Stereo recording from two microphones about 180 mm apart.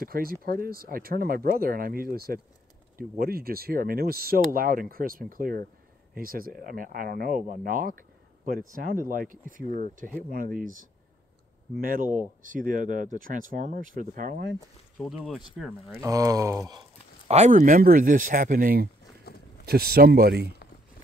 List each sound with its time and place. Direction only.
0.0 s speech: 55° right (ahead or behind)
15.0 s speech: centre (ahead or behind)
16.0 s speech: 20° right (ahead or behind)
17.3 s speech: 40° right (ahead or behind)
19.3 s a sound: 60° left (ahead or behind)
19.6 s speech: 60° right (ahead or behind)